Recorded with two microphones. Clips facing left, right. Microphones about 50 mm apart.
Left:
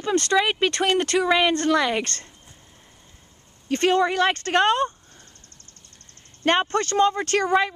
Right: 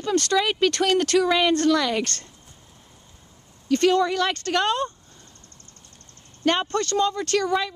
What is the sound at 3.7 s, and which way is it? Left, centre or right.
Speech, left.